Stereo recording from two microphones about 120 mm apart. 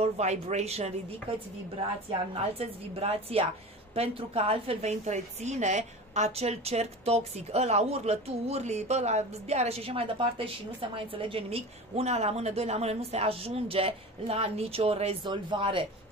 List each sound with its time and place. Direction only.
0.0 s a woman's voice: 70° right (ahead or behind)
2.3 s a woman's voice: 55° right (ahead or behind)
15.2 s a woman's voice: 45° right (ahead or behind)